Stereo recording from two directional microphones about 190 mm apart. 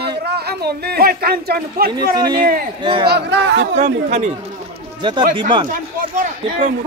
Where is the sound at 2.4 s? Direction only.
50° right (ahead or behind).